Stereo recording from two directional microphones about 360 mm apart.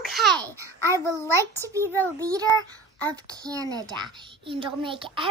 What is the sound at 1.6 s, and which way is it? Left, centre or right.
A child's voice, centre.